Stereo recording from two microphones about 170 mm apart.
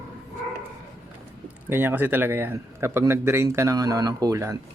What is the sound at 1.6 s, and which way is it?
A man's voice, 10° right (ahead or behind).